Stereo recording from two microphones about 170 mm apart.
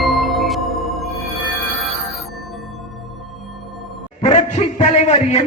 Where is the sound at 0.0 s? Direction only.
Centre (ahead or behind).